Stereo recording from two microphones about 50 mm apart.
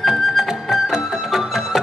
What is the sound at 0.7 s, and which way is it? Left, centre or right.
Music, centre.